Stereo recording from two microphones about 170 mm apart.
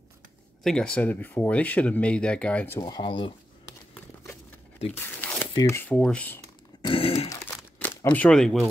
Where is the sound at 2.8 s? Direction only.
25° left (ahead or behind).